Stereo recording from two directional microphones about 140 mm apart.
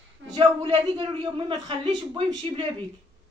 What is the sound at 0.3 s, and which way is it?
A man's voice, 35° right (ahead or behind).